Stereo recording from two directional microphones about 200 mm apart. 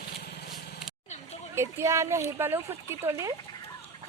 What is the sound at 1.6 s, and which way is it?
Speech, 15° right (ahead or behind).